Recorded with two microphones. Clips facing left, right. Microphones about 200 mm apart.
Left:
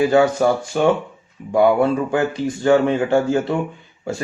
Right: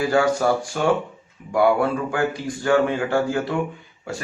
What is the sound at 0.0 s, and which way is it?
Speech, 20° left (ahead or behind).